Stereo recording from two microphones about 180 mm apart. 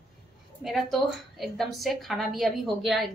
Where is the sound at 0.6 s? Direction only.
Centre (ahead or behind).